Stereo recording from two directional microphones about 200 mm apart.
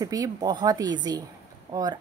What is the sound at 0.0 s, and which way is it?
A woman's voice, 20° right (ahead or behind).